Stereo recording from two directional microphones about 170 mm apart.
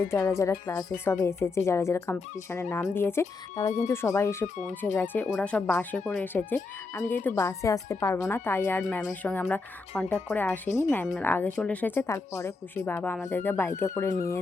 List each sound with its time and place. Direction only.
0.0 s a woman's voice: 15° left (ahead or behind)
14.1 s speech: 60° left (ahead or behind)